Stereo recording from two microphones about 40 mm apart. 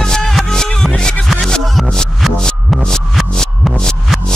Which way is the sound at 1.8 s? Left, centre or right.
Centre.